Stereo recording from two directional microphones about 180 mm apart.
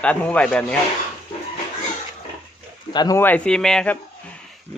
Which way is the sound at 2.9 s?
25° left (ahead or behind).